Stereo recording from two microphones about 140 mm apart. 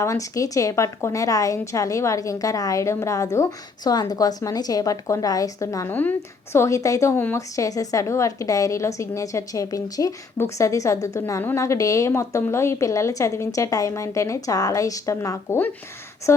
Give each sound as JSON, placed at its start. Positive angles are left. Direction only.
{"t": 0.0, "sound": "a woman's voice", "side_deg": 20}
{"t": 5.9, "sound": "a woman's voice", "side_deg": 10}